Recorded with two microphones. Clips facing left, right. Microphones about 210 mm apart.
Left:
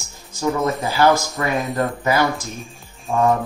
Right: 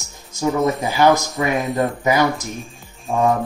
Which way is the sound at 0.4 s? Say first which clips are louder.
Right 2 dB; 20° right (ahead or behind).